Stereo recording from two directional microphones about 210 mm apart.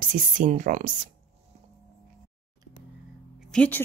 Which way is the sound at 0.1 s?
35° right (ahead or behind).